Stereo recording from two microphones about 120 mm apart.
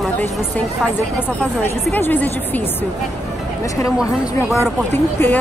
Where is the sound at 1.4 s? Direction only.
15° left (ahead or behind).